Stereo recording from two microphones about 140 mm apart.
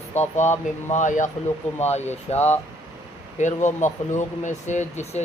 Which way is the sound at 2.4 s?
15° left (ahead or behind).